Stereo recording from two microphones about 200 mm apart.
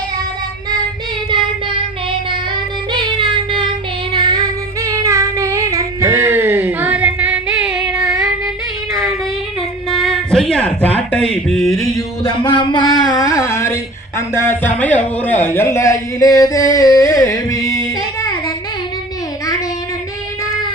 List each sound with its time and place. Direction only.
2.9 s child singing: 25° right (ahead or behind)
4.1 s female singing: 20° right (ahead or behind); by 8.1 s 5° right (ahead or behind)
9.9 s a sound: centre (ahead or behind)
11.9 s music: 20° left (ahead or behind)
14.2 s a sound: 15° left (ahead or behind)
18.2 s child singing: 20° left (ahead or behind)